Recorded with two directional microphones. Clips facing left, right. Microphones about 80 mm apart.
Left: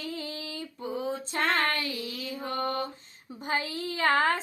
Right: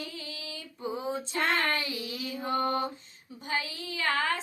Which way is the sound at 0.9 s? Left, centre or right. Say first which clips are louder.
Left 2 dB; centre.